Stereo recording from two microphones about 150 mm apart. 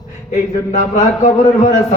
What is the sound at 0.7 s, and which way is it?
A man's voice, 50° left (ahead or behind).